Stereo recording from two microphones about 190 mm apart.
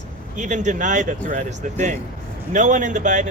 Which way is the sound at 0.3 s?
40° right (ahead or behind).